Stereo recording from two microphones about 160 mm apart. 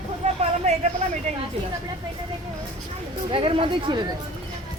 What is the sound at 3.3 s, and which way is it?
Chatter, 35° right (ahead or behind).